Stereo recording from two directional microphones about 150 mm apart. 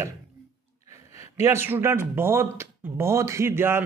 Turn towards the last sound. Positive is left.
turn(degrees=-15)  # may be behind; listen again after turning